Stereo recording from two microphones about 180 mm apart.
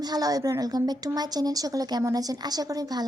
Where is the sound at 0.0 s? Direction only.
20° right (ahead or behind).